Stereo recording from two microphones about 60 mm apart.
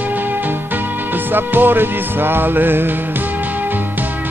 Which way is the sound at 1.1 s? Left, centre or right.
Right.